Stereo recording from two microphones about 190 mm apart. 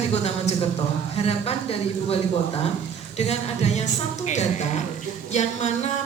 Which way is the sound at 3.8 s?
35° left (ahead or behind).